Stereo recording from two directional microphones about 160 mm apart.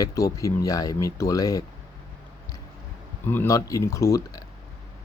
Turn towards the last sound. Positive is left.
turn(degrees=20)  # may be behind; listen again after turning